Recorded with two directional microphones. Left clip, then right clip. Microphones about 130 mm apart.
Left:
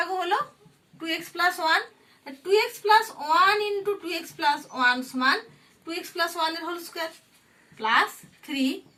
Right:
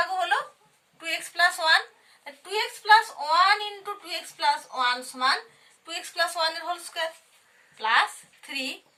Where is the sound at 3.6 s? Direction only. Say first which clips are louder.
Left 7 dB; 20° right (ahead or behind).